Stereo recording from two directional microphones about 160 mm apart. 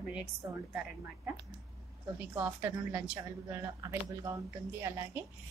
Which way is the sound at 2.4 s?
10° right (ahead or behind).